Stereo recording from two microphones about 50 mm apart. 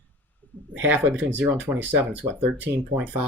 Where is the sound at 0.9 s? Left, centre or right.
Right.